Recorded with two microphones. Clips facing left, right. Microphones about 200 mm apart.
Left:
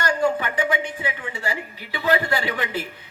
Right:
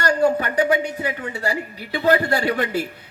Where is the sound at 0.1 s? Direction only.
40° right (ahead or behind).